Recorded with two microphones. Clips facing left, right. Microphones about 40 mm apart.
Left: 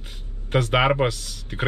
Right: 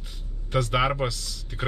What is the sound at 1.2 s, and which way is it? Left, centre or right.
Speech, left.